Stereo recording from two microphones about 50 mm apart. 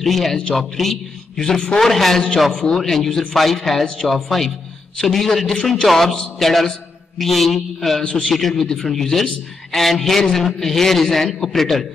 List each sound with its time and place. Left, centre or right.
0.0 s a man's voice: centre
5.9 s a man's voice: centre
8.0 s a man's voice: left
8.3 s a man's voice: centre